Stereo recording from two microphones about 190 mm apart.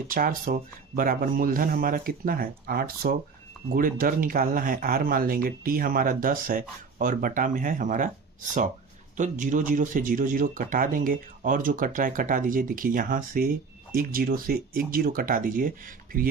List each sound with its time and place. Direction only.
0.1 s speech: 45° right (ahead or behind)